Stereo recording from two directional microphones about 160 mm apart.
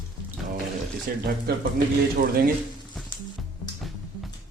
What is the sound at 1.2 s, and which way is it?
Speech, 80° right.